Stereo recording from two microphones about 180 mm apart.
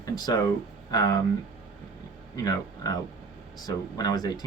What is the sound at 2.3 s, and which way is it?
Speech, 20° left (ahead or behind).